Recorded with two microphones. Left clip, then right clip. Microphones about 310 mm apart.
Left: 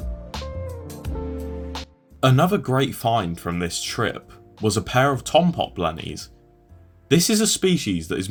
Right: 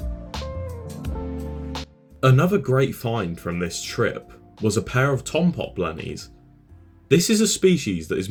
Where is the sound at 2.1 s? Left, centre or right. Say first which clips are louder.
Left 1 dB; left.